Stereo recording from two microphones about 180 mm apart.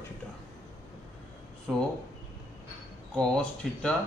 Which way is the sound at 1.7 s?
5° right (ahead or behind).